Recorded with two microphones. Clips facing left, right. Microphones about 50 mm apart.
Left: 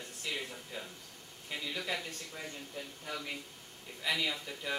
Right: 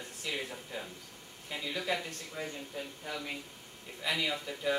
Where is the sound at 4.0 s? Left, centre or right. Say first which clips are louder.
Right 1 dB; centre.